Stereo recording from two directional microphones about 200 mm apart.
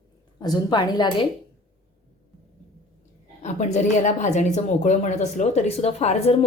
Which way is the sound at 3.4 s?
35° left (ahead or behind).